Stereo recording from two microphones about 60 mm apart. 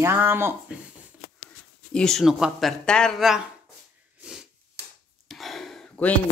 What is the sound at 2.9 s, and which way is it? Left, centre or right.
Speech, centre.